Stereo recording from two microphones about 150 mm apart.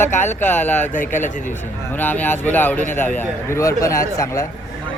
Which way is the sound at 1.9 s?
10° left (ahead or behind).